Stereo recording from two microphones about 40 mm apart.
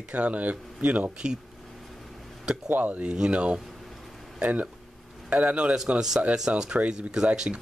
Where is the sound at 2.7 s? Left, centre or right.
Right.